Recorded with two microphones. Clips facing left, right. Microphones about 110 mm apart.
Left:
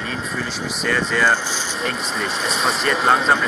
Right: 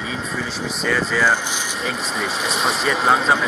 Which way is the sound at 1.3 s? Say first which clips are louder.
Even; 15° right (ahead or behind).